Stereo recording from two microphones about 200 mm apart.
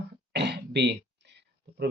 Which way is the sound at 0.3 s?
55° right (ahead or behind).